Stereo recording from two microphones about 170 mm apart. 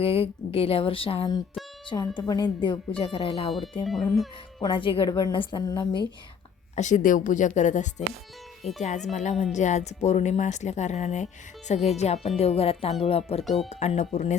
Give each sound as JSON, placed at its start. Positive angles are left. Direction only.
{"t": 0.0, "sound": "a woman's voice", "side_deg": 35}
{"t": 3.8, "sound": "speech", "side_deg": 0}
{"t": 4.6, "sound": "a woman's voice", "side_deg": 30}
{"t": 6.7, "sound": "a woman's voice", "side_deg": 50}
{"t": 13.4, "sound": "speech", "side_deg": 0}
{"t": 13.7, "sound": "a woman's voice", "side_deg": 40}